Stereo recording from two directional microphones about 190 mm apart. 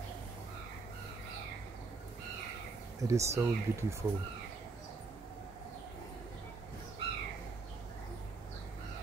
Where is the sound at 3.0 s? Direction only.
15° right (ahead or behind).